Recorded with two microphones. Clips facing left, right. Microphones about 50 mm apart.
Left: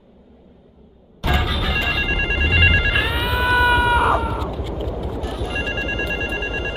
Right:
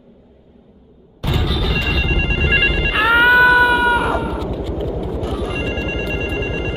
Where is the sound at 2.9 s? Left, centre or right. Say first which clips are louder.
Right 9 dB; right.